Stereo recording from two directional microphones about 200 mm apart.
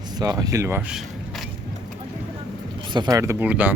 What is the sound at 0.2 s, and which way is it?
Speech, 20° right (ahead or behind).